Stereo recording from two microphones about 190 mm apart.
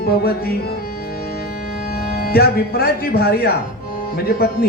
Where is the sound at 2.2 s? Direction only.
55° left (ahead or behind).